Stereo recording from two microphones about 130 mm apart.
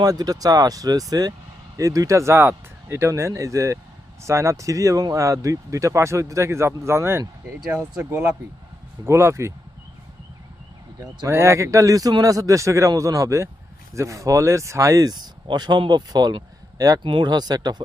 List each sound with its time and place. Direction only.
0.0 s speech: 30° right (ahead or behind)
11.3 s speech: 20° right (ahead or behind)